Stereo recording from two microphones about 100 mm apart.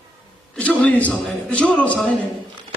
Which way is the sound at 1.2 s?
Centre (ahead or behind).